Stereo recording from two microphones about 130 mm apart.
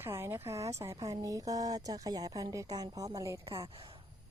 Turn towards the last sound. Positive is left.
turn(degrees=-45)  # may be behind; listen again after turning